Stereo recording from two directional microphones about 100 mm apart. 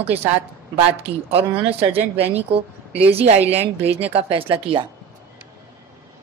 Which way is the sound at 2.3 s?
85° right.